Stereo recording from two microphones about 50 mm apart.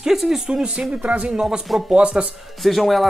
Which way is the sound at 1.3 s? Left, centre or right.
Centre.